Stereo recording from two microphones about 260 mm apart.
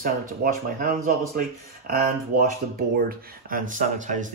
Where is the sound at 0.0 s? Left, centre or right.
Right.